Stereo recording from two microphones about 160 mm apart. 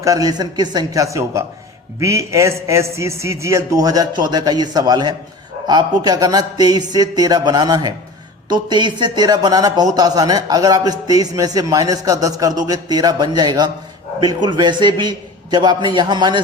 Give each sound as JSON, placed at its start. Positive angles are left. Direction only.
{"t": 0.0, "sound": "speech", "side_deg": -20}